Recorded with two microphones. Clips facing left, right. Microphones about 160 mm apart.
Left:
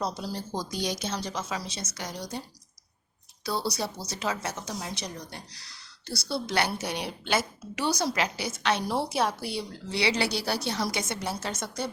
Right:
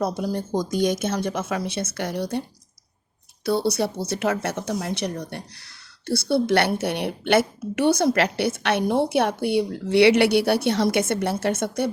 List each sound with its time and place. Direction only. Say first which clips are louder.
0.0 s speech: right 7 dB; 50° right (ahead or behind)
3.4 s speech: right 8 dB; 60° right (ahead or behind)